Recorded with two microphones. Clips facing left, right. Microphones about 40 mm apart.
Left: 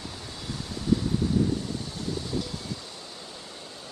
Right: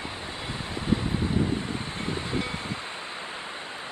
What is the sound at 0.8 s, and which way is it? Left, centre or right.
Wind, right.